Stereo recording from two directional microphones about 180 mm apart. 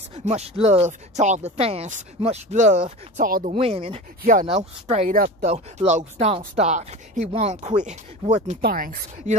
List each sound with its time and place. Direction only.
0.1 s speech: 40° right (ahead or behind)
3.5 s speech: 35° right (ahead or behind)
4.2 s speech: 45° right (ahead or behind)
5.1 s speech: 55° right (ahead or behind)
5.5 s speech: 40° right (ahead or behind)
8.5 s speech: 55° right (ahead or behind)